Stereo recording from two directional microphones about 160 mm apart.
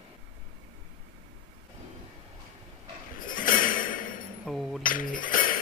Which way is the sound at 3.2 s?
60° left (ahead or behind).